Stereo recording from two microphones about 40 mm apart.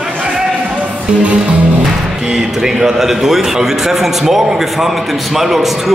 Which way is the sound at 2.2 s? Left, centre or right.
Centre.